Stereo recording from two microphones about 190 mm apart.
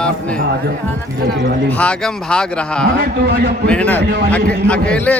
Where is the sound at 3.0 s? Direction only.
60° right (ahead or behind).